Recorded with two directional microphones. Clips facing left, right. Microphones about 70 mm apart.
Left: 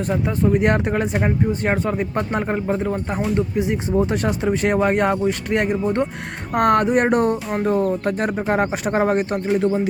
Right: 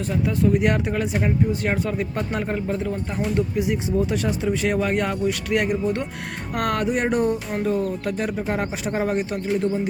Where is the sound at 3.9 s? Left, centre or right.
Left.